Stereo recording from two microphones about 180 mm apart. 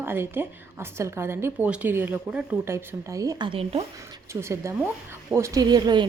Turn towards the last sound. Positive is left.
turn(degrees=-25)  # may be behind; listen again after turning